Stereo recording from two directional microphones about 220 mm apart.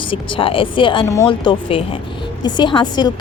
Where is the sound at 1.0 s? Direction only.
10° left (ahead or behind).